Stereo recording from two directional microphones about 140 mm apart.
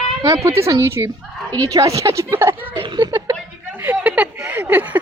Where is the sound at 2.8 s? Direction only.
35° right (ahead or behind).